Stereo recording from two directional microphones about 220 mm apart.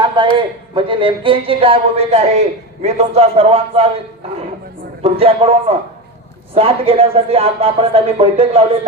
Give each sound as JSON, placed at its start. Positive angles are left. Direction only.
{"t": 0.2, "sound": "speech", "side_deg": -20}
{"t": 5.0, "sound": "speech", "side_deg": -25}